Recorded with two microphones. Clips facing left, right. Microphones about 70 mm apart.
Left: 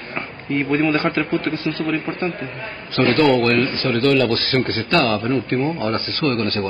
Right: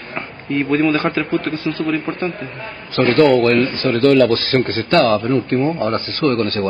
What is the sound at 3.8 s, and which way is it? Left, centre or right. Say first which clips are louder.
Speech: right 3 dB; centre.